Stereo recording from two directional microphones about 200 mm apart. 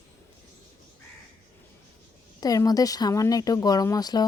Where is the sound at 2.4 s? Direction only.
20° left (ahead or behind).